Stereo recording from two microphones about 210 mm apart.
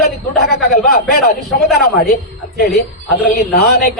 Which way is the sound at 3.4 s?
50° left (ahead or behind).